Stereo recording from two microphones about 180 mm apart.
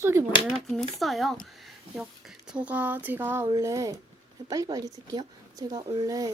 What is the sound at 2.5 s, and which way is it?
Speech, 10° right (ahead or behind).